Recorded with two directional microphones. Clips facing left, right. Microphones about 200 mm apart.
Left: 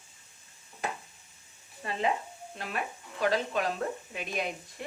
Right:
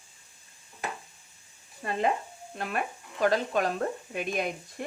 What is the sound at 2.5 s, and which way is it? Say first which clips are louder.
A woman's voice: right 4 dB; 50° right (ahead or behind).